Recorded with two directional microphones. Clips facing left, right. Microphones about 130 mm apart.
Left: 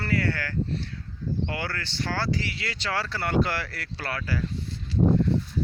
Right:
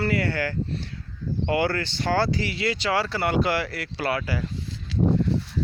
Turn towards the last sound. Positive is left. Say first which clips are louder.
# even
turn(degrees=-90)